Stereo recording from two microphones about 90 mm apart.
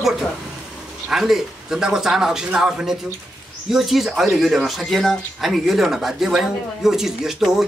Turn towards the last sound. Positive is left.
turn(degrees=-5)  # may be behind; listen again after turning